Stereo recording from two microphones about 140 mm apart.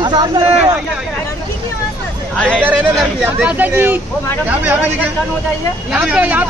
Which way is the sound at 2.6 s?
10° right (ahead or behind).